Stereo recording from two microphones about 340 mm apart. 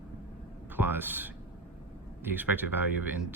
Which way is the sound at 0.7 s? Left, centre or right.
Centre.